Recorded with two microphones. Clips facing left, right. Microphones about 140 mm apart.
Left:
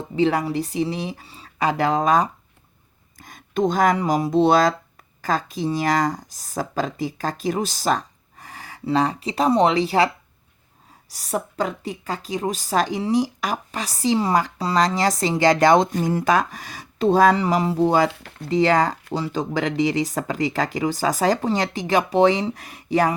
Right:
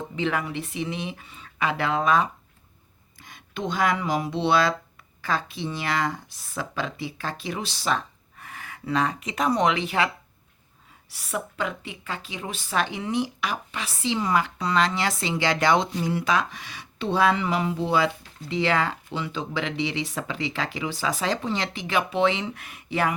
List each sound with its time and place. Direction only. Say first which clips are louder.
0.2 s a woman's voice: left 8 dB; 35° left (ahead or behind)
11.1 s a woman's voice: left 5 dB; 40° left (ahead or behind)
18.1 s speech: left 3 dB; 70° left (ahead or behind)
18.4 s a woman's voice: left 6 dB; 40° left (ahead or behind)